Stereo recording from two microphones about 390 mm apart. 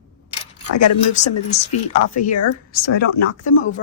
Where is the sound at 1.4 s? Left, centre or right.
Centre.